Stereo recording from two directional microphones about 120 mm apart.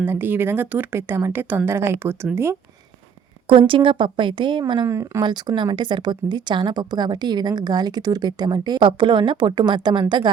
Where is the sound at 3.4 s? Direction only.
45° right (ahead or behind).